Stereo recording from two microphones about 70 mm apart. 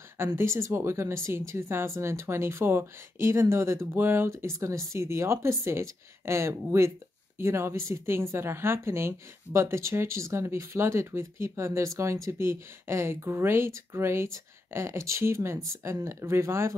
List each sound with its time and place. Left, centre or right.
0.4 s speech: right